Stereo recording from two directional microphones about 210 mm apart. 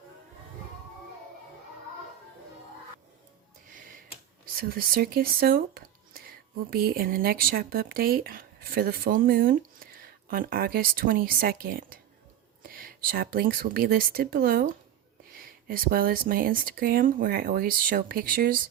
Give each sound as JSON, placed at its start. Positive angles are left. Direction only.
{"t": 4.5, "sound": "speech", "side_deg": -45}